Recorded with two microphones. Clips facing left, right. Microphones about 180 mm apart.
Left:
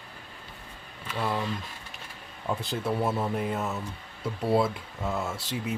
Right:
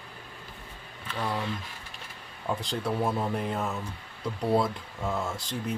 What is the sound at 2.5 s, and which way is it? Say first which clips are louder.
Speech: left 1 dB; 5° left (ahead or behind).